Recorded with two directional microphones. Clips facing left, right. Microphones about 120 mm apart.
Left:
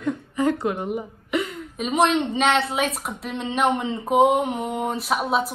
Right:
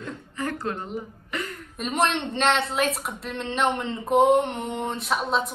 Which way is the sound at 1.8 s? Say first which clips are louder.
Left 5 dB; centre (ahead or behind).